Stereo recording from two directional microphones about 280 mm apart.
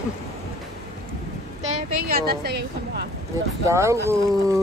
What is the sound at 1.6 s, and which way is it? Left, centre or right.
A woman's voice, right.